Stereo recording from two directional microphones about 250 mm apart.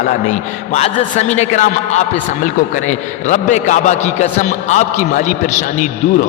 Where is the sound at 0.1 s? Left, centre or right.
Left.